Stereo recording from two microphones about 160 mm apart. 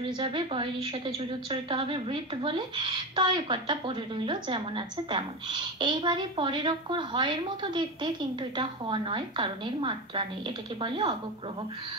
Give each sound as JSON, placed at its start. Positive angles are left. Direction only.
{"t": 0.2, "sound": "a woman's voice", "side_deg": -35}